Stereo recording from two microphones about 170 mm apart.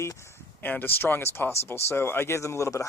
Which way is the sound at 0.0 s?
15° left (ahead or behind).